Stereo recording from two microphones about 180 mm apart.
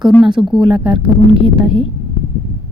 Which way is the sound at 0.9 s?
30° right (ahead or behind).